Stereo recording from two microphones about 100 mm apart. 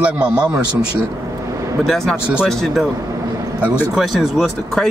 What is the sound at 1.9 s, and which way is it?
Speech, 5° left (ahead or behind).